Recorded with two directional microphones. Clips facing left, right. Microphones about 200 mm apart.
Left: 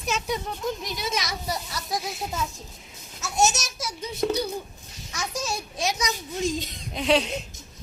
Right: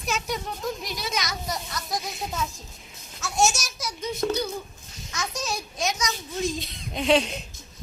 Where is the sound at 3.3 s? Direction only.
20° left (ahead or behind).